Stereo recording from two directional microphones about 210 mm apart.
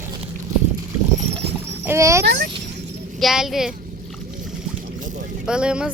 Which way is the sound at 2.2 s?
50° right (ahead or behind).